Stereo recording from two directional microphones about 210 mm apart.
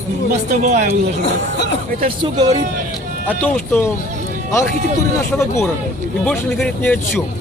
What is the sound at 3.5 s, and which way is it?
Speech, 10° left (ahead or behind).